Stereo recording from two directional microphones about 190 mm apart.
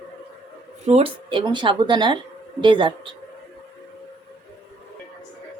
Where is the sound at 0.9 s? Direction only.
30° right (ahead or behind).